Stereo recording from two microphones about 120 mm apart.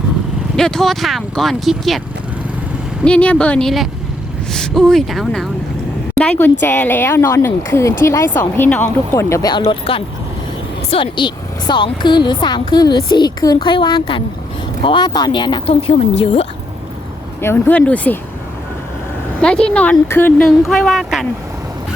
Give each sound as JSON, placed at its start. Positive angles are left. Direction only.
{"t": 0.5, "sound": "speech", "side_deg": 5}
{"t": 3.0, "sound": "speech", "side_deg": 10}
{"t": 6.1, "sound": "speech", "side_deg": 10}
{"t": 9.5, "sound": "a woman's voice", "side_deg": 45}
{"t": 15.7, "sound": "a woman's voice", "side_deg": 55}
{"t": 17.4, "sound": "speech", "side_deg": 15}
{"t": 19.4, "sound": "speech", "side_deg": 5}
{"t": 20.4, "sound": "speech", "side_deg": 0}